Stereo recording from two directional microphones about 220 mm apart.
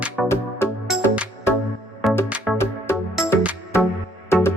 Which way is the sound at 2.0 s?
Centre (ahead or behind).